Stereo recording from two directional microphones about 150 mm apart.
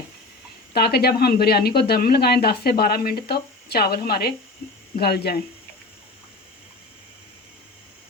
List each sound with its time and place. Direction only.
0.7 s speech: 90° left